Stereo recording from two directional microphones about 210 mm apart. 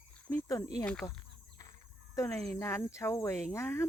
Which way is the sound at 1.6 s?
15° left (ahead or behind).